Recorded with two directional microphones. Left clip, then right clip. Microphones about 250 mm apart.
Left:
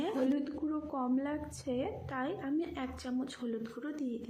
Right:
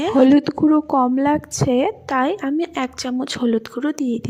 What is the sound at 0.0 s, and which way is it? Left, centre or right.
A woman's voice, right.